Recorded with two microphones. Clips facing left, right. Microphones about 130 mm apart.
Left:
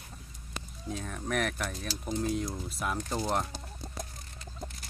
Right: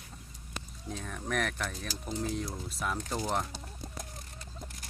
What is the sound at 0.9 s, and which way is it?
Speech, 5° left (ahead or behind).